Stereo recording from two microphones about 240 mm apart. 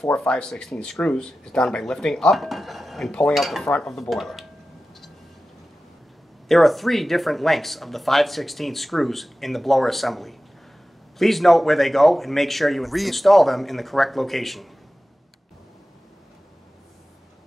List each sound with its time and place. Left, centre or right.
0.0 s speech: centre
6.5 s speech: centre